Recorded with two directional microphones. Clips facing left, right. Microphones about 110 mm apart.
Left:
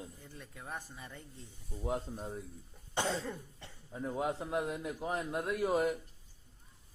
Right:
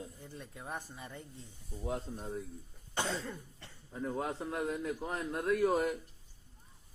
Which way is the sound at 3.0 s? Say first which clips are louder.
Left 2 dB; 25° left (ahead or behind).